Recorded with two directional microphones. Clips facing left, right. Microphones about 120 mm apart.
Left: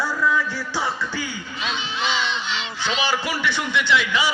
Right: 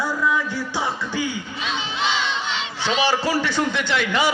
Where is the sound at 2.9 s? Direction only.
35° right (ahead or behind); by 4.3 s 50° right (ahead or behind).